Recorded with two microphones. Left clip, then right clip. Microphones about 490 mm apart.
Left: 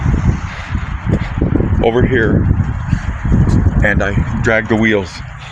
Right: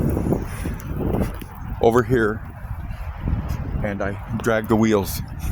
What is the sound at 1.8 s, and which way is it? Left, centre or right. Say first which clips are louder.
Speech: left 3 dB; right.